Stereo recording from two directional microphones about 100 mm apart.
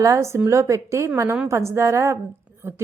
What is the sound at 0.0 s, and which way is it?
Speech, 30° right (ahead or behind).